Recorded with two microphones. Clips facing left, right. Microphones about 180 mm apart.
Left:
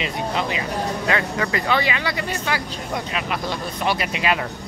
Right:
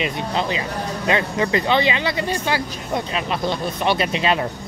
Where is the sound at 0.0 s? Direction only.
30° right (ahead or behind).